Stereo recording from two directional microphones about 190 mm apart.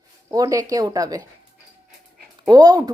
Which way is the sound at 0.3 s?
20° right (ahead or behind).